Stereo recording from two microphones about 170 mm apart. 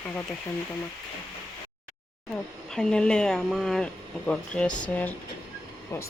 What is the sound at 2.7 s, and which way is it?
Speech, 5° left (ahead or behind).